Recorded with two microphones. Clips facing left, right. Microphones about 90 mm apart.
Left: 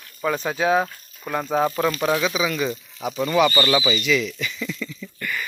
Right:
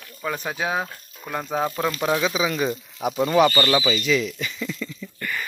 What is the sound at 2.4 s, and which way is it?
Speech, 30° right (ahead or behind).